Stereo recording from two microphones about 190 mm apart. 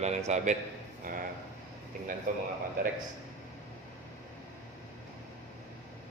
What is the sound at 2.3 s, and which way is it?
Speech, 45° right (ahead or behind).